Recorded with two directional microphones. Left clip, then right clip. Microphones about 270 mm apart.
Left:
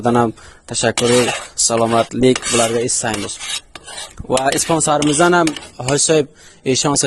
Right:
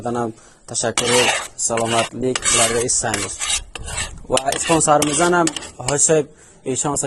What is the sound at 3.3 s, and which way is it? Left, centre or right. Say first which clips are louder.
Filing: right 2 dB; right.